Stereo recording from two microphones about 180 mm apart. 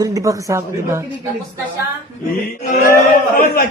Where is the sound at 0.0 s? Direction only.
20° right (ahead or behind).